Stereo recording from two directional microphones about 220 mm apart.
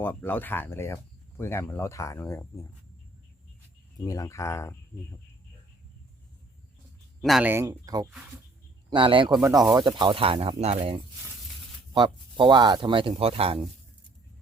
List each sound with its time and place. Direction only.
0.0 s speech: 10° left (ahead or behind)
4.0 s speech: 15° left (ahead or behind)
7.2 s speech: centre (ahead or behind); by 13.7 s 25° right (ahead or behind)